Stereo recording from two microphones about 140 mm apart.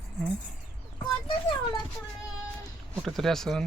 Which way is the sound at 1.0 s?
30° left (ahead or behind).